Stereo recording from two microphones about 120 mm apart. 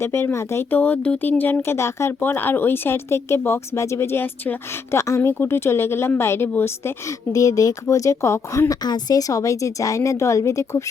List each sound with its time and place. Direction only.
0.0 s a woman's voice: 20° left (ahead or behind)
7.3 s speech: 30° left (ahead or behind)